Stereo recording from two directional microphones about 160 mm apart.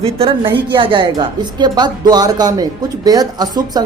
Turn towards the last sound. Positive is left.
turn(degrees=-25)  # may be behind; listen again after turning